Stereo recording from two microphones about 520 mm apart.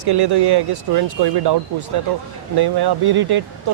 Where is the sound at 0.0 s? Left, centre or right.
Right.